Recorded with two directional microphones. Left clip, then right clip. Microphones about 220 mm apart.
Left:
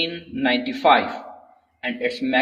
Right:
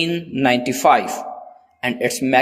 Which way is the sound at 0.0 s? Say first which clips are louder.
Right 5 dB; 40° right (ahead or behind).